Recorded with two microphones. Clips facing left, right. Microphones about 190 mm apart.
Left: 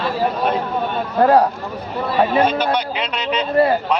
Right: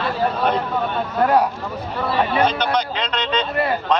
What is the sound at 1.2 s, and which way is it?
Speech, 30° left (ahead or behind).